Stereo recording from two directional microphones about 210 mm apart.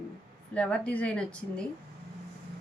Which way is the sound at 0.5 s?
5° left (ahead or behind).